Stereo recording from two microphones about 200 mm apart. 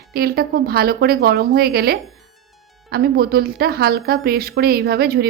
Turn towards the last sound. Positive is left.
turn(degrees=-50)  # may be behind; listen again after turning